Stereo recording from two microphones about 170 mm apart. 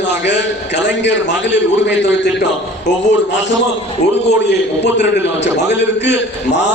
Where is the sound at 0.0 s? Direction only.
90° left.